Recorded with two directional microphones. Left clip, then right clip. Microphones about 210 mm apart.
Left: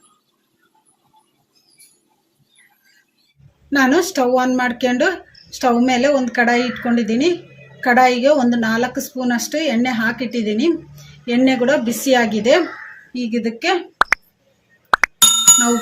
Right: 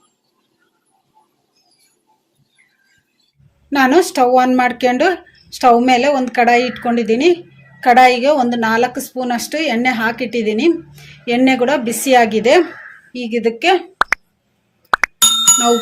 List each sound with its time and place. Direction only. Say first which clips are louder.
3.7 s speech: right 3 dB; 35° right (ahead or behind)
14.8 s music: even; centre (ahead or behind)